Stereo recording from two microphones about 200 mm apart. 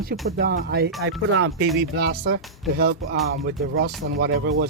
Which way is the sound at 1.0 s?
90° right.